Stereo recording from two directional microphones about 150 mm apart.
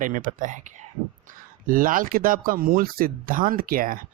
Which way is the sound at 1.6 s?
65° right (ahead or behind).